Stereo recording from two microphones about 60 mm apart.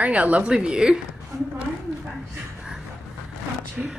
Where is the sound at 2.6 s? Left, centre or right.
Centre.